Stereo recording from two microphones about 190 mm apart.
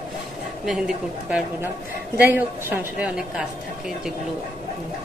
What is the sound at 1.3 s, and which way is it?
A woman's voice, 5° right (ahead or behind).